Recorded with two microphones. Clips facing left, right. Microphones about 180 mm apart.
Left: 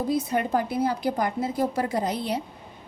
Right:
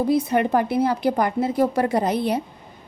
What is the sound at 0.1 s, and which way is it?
A woman's voice, 65° right (ahead or behind).